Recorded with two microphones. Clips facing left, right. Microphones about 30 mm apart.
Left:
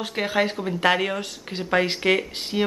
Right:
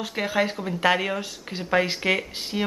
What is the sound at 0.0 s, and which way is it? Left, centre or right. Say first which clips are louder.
Speech: left 1 dB; centre.